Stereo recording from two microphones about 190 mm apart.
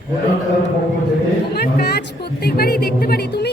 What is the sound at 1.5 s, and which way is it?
A woman's voice, 60° left (ahead or behind).